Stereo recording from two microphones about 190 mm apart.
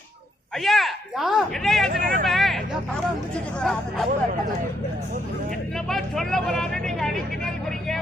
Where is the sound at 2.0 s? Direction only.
45° right (ahead or behind).